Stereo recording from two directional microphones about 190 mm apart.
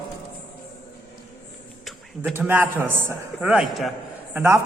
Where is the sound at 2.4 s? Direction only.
10° right (ahead or behind).